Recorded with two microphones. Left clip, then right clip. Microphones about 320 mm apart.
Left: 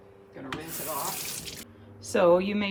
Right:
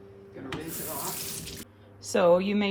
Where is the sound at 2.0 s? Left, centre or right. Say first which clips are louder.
Even; centre.